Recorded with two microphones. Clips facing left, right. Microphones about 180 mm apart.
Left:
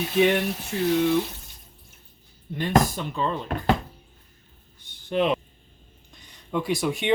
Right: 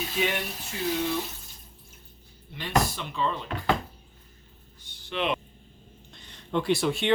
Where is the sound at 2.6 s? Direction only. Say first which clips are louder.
Left 5 dB; 45° left (ahead or behind).